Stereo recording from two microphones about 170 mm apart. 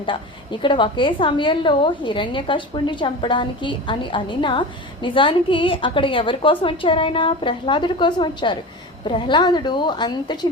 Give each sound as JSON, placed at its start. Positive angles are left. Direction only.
{"t": 0.6, "sound": "a woman's voice", "side_deg": 30}